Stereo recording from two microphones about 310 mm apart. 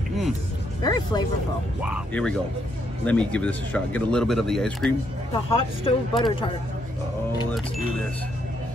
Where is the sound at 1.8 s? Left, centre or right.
Centre.